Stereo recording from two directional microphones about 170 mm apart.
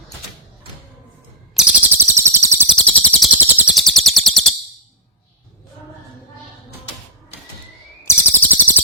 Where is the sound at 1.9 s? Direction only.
15° right (ahead or behind).